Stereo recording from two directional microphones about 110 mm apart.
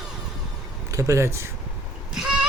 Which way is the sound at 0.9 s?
30° right (ahead or behind).